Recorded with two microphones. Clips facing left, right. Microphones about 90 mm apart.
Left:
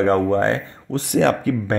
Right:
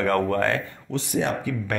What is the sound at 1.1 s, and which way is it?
Speech, 80° left.